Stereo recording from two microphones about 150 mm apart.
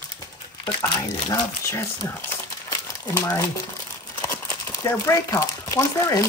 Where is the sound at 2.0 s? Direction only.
15° left (ahead or behind).